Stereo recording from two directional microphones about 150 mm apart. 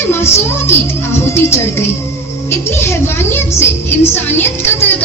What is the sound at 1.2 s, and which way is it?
A woman's voice, 15° left (ahead or behind).